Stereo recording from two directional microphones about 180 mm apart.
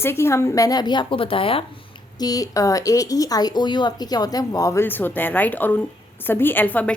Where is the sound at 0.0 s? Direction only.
15° left (ahead or behind).